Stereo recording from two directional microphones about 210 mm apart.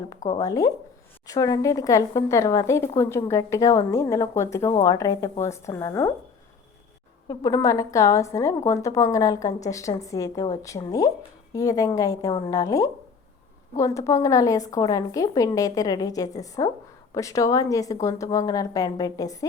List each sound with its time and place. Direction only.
0.3 s speech: 15° left (ahead or behind)
7.3 s speech: 20° left (ahead or behind)